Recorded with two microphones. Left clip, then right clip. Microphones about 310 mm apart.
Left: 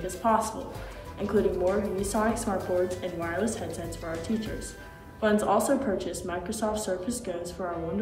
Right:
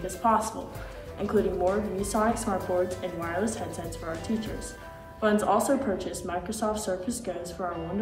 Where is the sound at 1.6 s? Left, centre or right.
Centre.